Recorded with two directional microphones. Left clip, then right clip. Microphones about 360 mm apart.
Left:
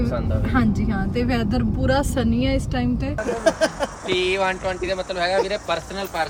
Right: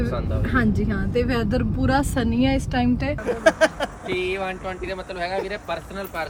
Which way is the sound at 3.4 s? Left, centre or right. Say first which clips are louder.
Right 2 dB; centre.